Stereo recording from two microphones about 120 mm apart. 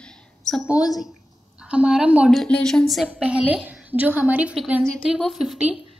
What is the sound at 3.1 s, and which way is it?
A woman's voice, 10° right (ahead or behind).